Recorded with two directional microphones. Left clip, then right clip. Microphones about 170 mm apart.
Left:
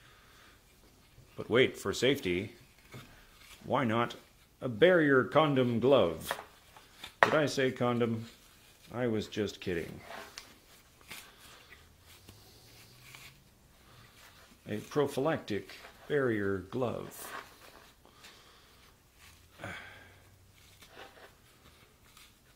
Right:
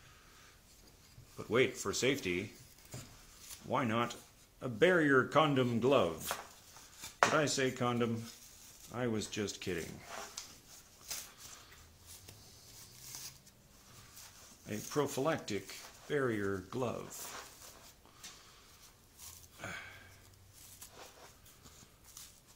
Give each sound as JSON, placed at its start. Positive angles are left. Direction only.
{"t": 1.4, "sound": "speech", "side_deg": 35}
{"t": 3.6, "sound": "speech", "side_deg": 35}
{"t": 7.3, "sound": "speech", "side_deg": 25}
{"t": 14.7, "sound": "speech", "side_deg": 25}